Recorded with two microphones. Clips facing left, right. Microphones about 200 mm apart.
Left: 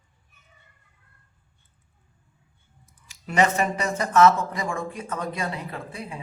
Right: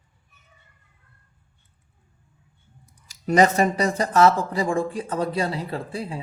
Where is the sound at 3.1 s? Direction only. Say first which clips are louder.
Right 4 dB; 40° right (ahead or behind).